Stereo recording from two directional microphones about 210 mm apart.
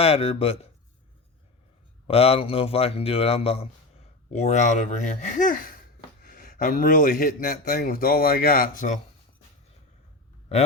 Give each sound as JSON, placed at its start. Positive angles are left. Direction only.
{"t": 0.0, "sound": "a man's voice", "side_deg": 30}
{"t": 2.0, "sound": "a man's voice", "side_deg": 30}